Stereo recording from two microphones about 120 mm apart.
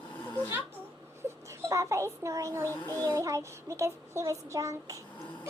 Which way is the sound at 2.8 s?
15° left (ahead or behind).